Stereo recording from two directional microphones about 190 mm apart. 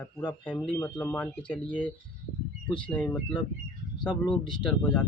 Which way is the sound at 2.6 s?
25° left (ahead or behind).